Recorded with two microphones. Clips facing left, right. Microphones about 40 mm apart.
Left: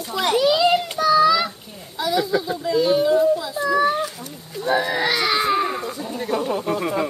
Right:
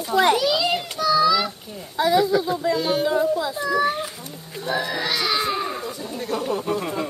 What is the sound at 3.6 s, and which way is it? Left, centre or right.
Speech, centre.